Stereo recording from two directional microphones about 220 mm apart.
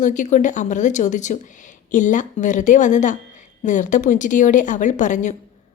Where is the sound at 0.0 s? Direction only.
35° left (ahead or behind).